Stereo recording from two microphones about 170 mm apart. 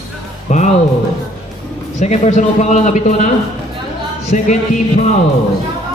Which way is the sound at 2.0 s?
40° left (ahead or behind).